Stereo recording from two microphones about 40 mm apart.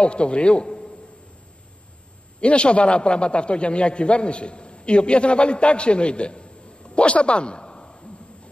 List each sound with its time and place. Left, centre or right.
0.0 s a man's voice: left
2.4 s a man's voice: left